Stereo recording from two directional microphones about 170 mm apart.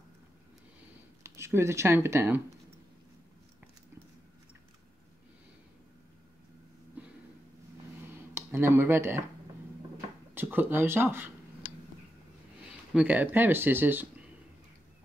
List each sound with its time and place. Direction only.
1.2 s speech: 15° right (ahead or behind)
7.0 s a sound: 10° right (ahead or behind)
8.4 s speech: 15° right (ahead or behind)
10.3 s speech: 10° right (ahead or behind)
12.9 s speech: 10° right (ahead or behind)